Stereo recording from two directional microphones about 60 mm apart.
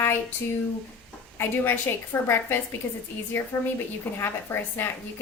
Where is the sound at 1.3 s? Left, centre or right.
Left.